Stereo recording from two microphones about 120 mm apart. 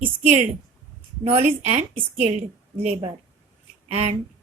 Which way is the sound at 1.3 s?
65° right (ahead or behind).